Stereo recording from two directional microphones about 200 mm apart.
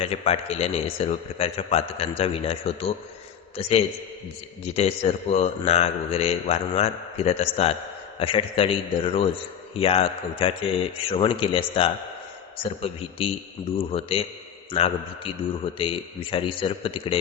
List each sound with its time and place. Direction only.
0.0 s a man's voice: 30° left (ahead or behind)